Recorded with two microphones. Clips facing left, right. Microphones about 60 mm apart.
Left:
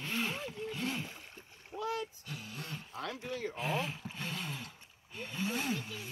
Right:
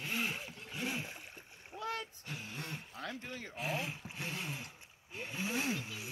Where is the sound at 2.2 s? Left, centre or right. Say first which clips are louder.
Even; right.